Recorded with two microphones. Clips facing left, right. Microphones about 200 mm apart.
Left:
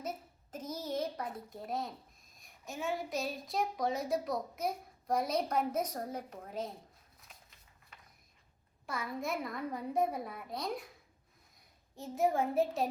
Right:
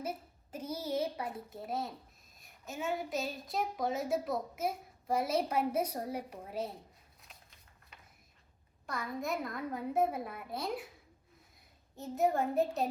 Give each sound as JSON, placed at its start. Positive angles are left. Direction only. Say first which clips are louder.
{"t": 0.5, "sound": "a sound", "louder": "right 2 dB", "side_deg": -10}
{"t": 2.4, "sound": "a child's voice", "louder": "even", "side_deg": 0}
{"t": 8.9, "sound": "a child's voice", "louder": "right 1 dB", "side_deg": 0}
{"t": 11.9, "sound": "a child's voice", "louder": "even", "side_deg": 0}